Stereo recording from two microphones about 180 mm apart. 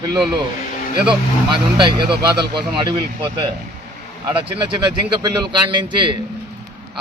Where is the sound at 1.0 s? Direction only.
25° right (ahead or behind).